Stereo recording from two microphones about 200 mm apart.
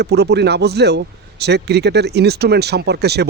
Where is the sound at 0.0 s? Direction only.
55° right (ahead or behind).